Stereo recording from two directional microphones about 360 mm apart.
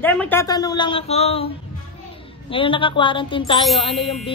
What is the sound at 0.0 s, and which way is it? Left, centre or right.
Speech, centre.